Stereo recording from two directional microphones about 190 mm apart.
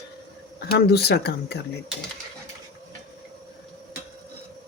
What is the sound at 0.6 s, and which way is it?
Speech, 55° left (ahead or behind).